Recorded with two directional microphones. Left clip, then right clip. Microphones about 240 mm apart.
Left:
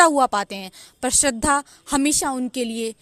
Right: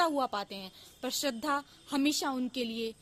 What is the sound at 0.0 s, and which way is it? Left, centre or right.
A woman's voice, left.